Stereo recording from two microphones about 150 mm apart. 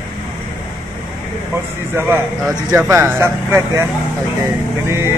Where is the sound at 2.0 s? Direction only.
15° right (ahead or behind).